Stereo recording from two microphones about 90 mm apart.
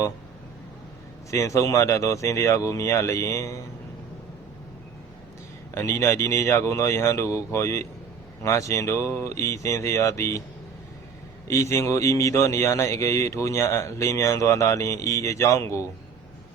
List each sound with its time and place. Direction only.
1.3 s a man's voice: 35° left (ahead or behind)
5.7 s a man's voice: 30° left (ahead or behind)
11.4 s a man's voice: 35° left (ahead or behind)